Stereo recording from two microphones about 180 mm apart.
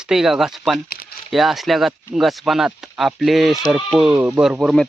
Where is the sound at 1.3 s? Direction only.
Centre (ahead or behind).